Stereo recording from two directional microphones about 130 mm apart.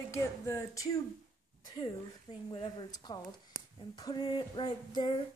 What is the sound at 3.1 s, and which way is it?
Female singing, 35° left (ahead or behind).